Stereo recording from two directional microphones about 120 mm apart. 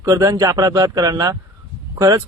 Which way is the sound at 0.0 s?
30° right (ahead or behind).